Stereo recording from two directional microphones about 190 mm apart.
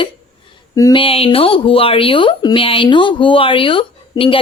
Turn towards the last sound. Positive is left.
turn(degrees=25)  # may be behind; listen again after turning